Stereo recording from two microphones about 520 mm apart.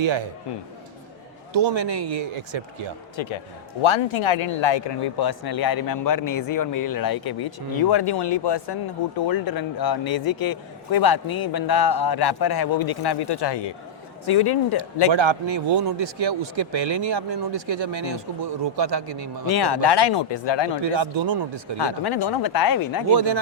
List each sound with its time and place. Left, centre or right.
1.5 s speech: right
2.5 s speech: right
3.2 s speech: left
15.1 s speech: right
16.1 s speech: right
19.0 s speech: right
19.5 s speech: left
20.9 s speech: right
21.8 s speech: left